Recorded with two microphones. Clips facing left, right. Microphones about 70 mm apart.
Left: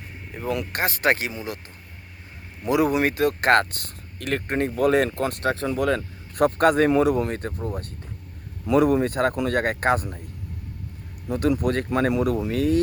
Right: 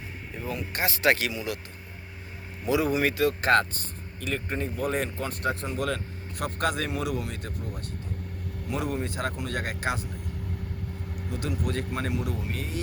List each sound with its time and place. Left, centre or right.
0.4 s speech: left
0.8 s speech: left
2.6 s speech: left
5.8 s speech: left
8.6 s speech: left
11.3 s speech: left